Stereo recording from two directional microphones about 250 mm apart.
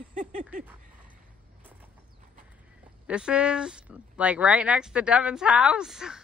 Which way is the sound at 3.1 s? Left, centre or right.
Centre.